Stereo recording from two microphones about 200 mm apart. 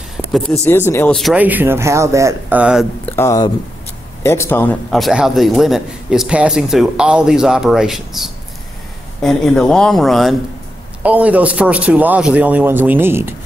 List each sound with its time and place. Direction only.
0.2 s a sound: 5° right (ahead or behind)
0.7 s a man's voice: 10° left (ahead or behind); by 2.9 s 5° right (ahead or behind)
3.1 s a man's voice: 15° left (ahead or behind); by 13.3 s 10° right (ahead or behind)